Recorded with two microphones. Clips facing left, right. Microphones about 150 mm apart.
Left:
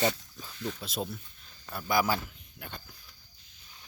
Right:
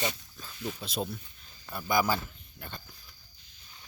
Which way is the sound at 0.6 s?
10° right (ahead or behind).